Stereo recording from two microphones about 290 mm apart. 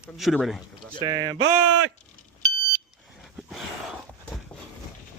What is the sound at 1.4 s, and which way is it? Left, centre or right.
Speech, right.